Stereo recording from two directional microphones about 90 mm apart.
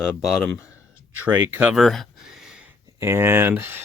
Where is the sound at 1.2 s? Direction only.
25° right (ahead or behind).